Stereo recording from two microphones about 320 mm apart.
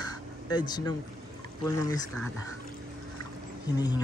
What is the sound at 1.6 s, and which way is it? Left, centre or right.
Speech, centre.